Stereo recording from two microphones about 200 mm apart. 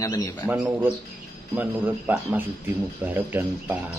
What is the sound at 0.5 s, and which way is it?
A man's voice, 10° right (ahead or behind).